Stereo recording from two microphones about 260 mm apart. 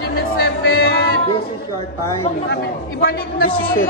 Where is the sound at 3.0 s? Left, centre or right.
Left.